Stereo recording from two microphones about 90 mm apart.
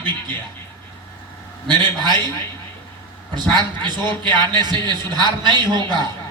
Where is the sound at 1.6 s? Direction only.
60° right (ahead or behind).